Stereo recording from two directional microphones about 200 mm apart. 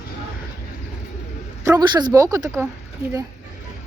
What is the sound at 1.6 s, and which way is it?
Speech, 20° right (ahead or behind).